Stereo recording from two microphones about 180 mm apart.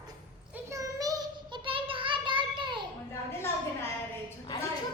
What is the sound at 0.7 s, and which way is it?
Child singing, 20° right (ahead or behind).